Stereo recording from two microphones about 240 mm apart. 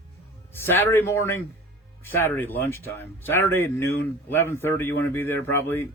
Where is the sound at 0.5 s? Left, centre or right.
Centre.